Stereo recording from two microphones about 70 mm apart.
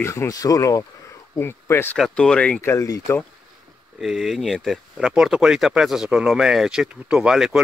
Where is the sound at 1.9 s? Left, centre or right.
Centre.